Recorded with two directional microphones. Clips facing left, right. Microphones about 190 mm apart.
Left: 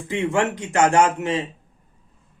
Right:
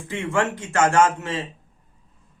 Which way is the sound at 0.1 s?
15° left (ahead or behind).